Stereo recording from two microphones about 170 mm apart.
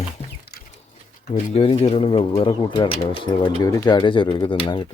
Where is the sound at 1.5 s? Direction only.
35° left (ahead or behind).